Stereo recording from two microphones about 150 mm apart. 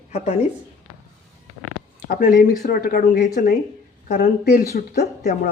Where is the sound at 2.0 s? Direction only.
85° left.